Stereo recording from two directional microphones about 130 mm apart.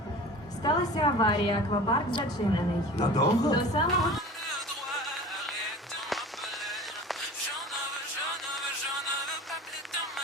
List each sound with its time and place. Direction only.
0.6 s a woman's voice: 30° left (ahead or behind)
4.0 s music: centre (ahead or behind)
6.7 s music: centre (ahead or behind)